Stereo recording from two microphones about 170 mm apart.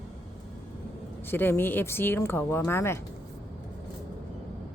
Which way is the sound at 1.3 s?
10° left (ahead or behind).